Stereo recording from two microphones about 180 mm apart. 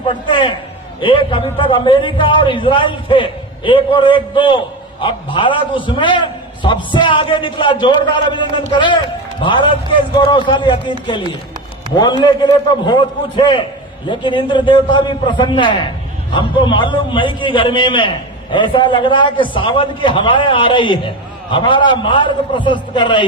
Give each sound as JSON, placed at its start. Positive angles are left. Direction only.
{"t": 0.1, "sound": "a man's voice", "side_deg": 25}
{"t": 11.9, "sound": "a man's voice", "side_deg": 25}